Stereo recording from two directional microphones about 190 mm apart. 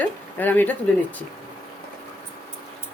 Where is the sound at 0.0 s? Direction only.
10° left (ahead or behind).